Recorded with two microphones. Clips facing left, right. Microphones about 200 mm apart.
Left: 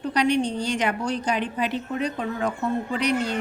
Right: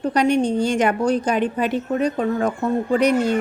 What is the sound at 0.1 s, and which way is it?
A woman's voice, 45° right (ahead or behind).